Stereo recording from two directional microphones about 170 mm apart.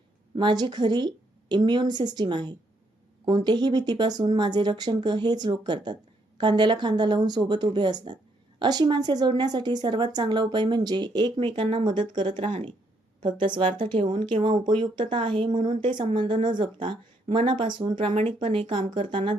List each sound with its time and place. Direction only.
0.3 s speech: 25° right (ahead or behind)